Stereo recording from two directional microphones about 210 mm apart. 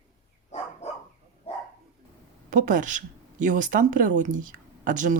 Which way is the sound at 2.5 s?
40° right (ahead or behind).